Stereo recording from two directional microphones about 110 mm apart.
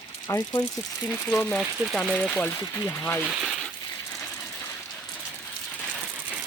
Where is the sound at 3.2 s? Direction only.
10° right (ahead or behind).